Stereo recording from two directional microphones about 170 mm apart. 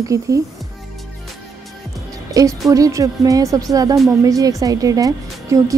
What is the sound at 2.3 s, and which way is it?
Music, 20° right (ahead or behind).